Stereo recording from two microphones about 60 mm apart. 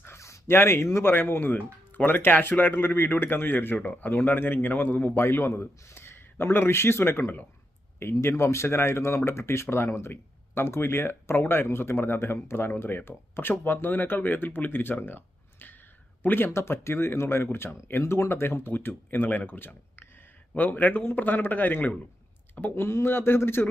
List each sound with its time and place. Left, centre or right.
0.2 s a sound: left
0.5 s speech: left
1.1 s speech: left
5.2 s speech: left
22.7 s speech: left